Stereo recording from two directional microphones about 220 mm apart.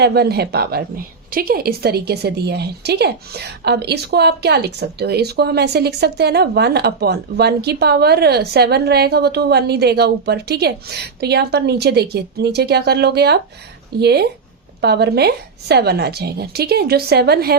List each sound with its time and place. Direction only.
0.0 s a woman's voice: 45° right (ahead or behind)